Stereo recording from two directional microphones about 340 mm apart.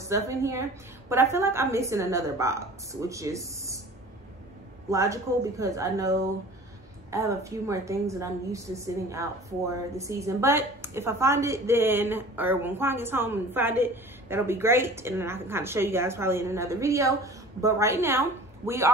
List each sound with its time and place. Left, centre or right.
0.0 s a woman's voice: centre
4.8 s a woman's voice: centre